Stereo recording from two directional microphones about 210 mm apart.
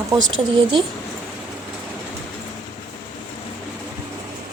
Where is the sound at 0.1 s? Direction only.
20° right (ahead or behind).